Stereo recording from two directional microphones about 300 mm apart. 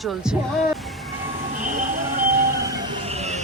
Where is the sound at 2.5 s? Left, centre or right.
Centre.